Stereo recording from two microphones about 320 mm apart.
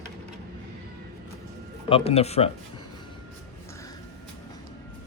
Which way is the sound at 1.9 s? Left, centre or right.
Centre.